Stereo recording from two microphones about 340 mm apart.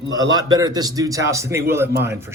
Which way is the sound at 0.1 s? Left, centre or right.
Centre.